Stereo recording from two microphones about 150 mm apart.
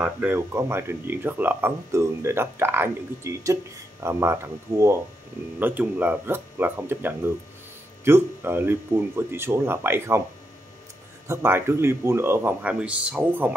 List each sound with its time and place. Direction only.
0.0 s speech: 10° right (ahead or behind)
11.2 s speech: 15° right (ahead or behind)